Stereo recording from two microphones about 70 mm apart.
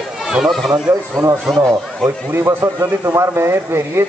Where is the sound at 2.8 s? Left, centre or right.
Right.